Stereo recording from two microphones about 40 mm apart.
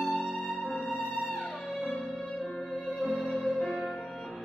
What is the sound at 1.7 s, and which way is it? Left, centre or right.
Music, left.